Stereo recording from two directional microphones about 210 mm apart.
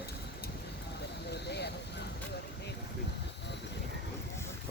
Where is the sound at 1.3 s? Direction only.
50° left (ahead or behind).